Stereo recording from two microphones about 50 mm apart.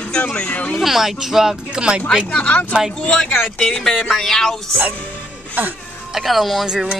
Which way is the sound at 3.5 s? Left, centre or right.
Centre.